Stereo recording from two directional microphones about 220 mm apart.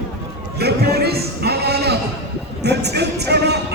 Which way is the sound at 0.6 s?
45° right (ahead or behind).